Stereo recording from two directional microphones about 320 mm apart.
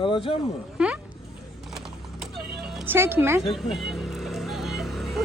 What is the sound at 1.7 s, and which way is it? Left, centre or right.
Typing, centre.